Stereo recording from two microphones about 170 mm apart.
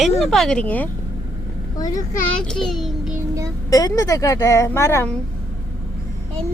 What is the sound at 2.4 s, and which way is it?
Speech, 5° left (ahead or behind).